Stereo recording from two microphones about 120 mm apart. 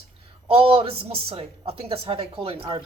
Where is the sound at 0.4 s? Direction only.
50° right (ahead or behind).